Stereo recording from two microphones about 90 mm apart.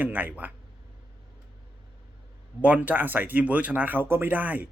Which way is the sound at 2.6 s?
15° right (ahead or behind).